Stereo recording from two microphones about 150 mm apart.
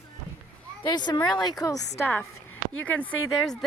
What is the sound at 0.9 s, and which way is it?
Speech, 30° left (ahead or behind).